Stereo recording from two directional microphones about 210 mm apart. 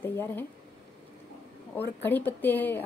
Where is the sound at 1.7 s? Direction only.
10° left (ahead or behind).